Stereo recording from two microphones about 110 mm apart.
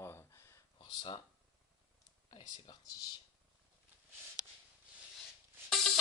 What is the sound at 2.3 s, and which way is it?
Speech, 40° left (ahead or behind).